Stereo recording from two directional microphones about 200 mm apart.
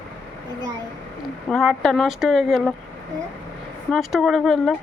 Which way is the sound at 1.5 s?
Centre (ahead or behind).